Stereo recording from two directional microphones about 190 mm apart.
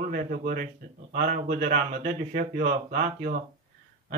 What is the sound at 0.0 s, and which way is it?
Speech, 45° right (ahead or behind).